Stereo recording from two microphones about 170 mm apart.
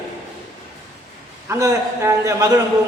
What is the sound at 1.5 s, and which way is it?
A man's voice, 15° right (ahead or behind).